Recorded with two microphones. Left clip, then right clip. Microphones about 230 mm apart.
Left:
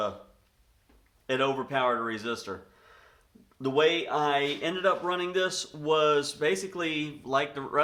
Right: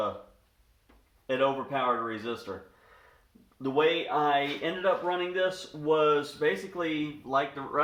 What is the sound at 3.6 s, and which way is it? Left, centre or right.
Speech, left.